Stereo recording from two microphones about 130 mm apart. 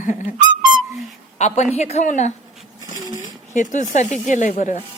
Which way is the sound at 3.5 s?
70° left (ahead or behind).